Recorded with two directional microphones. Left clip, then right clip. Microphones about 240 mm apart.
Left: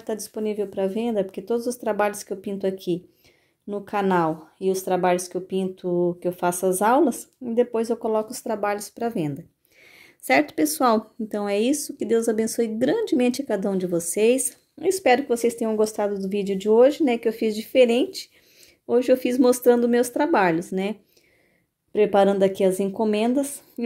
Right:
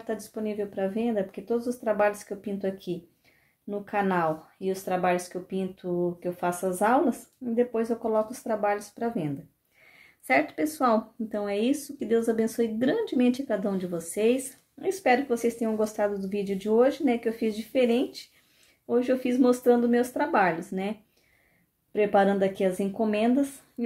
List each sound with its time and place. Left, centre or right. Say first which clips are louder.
0.0 s speech: left 5 dB; left
21.9 s speech: left 4 dB; left